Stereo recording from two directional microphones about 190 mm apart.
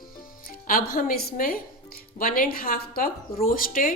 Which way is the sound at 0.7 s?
50° left (ahead or behind).